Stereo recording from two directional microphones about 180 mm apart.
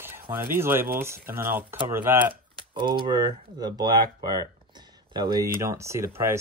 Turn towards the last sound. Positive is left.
turn(degrees=-15)  # may be behind; listen again after turning